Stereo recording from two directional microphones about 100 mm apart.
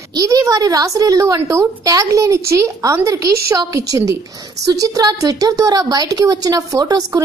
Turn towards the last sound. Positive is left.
turn(degrees=-35)  # may be behind; listen again after turning